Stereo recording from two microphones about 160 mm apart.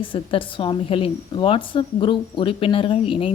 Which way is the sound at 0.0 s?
35° left (ahead or behind).